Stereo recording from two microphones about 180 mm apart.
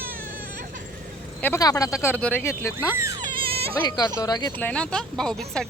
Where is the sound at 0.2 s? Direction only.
50° right (ahead or behind).